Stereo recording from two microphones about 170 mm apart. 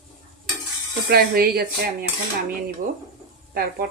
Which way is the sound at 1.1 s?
65° right (ahead or behind).